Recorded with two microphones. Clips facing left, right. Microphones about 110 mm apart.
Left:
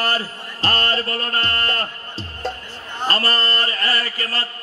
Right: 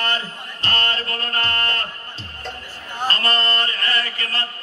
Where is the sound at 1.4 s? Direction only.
35° left (ahead or behind).